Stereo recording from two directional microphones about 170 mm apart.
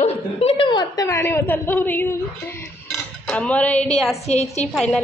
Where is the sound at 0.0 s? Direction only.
35° left (ahead or behind); by 2.6 s 15° left (ahead or behind).